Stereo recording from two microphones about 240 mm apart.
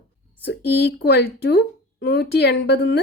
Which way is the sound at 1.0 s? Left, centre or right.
Left.